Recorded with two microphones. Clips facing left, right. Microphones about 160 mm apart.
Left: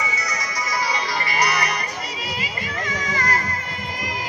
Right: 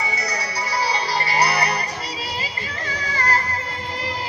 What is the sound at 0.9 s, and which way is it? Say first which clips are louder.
Music: right 2 dB; 30° right (ahead or behind).